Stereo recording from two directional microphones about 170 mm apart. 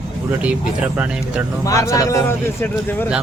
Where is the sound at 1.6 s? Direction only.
20° left (ahead or behind).